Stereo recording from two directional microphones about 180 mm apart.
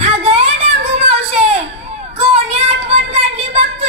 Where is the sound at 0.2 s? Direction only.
35° right (ahead or behind).